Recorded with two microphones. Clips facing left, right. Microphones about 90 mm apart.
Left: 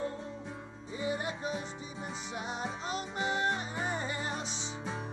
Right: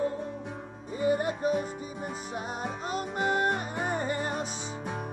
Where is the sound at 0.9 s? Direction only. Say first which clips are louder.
Right 8 dB; 50° right (ahead or behind).